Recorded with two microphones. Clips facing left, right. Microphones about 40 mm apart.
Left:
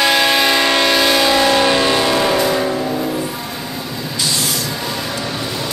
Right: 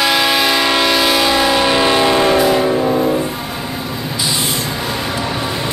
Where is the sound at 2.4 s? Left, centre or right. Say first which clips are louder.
Right 4 dB; centre.